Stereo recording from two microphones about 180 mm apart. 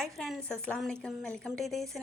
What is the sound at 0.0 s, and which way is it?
A woman's voice, centre (ahead or behind).